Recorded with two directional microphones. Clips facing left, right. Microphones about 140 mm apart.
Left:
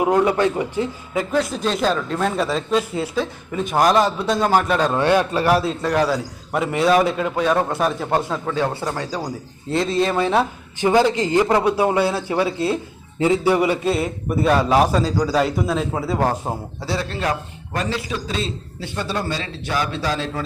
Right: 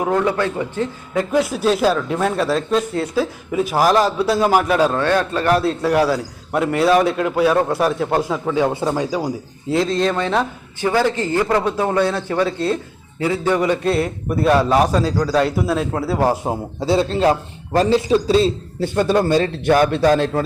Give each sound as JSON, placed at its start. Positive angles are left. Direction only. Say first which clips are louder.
{"t": 0.0, "sound": "a man's voice", "louder": "left 2 dB", "side_deg": 15}
{"t": 1.3, "sound": "a man's voice", "louder": "right 5 dB", "side_deg": -10}
{"t": 4.9, "sound": "a man's voice", "louder": "left 1 dB", "side_deg": 15}
{"t": 10.8, "sound": "a man's voice", "louder": "left 2 dB", "side_deg": 20}
{"t": 13.1, "sound": "a man's voice", "louder": "left 3 dB", "side_deg": 20}
{"t": 13.4, "sound": "a man's voice", "louder": "even", "side_deg": 10}
{"t": 16.8, "sound": "a man's voice", "louder": "right 8 dB", "side_deg": -25}